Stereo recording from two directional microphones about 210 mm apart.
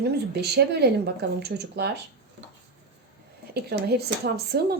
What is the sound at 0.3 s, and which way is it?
Speech, 50° right (ahead or behind).